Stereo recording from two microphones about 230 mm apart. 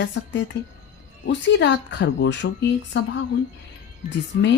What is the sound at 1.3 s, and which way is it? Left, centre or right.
Speech, left.